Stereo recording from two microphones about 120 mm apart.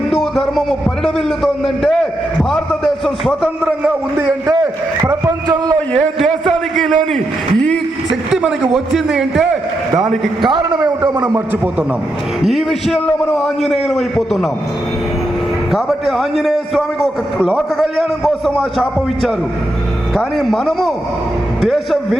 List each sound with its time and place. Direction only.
0.1 s a man's voice: centre (ahead or behind)
4.2 s a sound: 25° right (ahead or behind)
6.7 s a sound: centre (ahead or behind)
8.3 s a sound: 5° right (ahead or behind)
8.7 s a man's voice: 5° right (ahead or behind)
10.4 s a man's voice: 40° right (ahead or behind)
11.0 s a man's voice: 20° right (ahead or behind)
12.4 s a man's voice: centre (ahead or behind)
15.7 s a man's voice: centre (ahead or behind)